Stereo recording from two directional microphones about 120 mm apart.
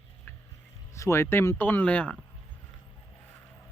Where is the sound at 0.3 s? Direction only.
15° left (ahead or behind).